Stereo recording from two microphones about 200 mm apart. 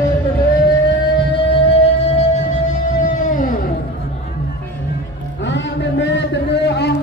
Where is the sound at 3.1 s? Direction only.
40° left (ahead or behind).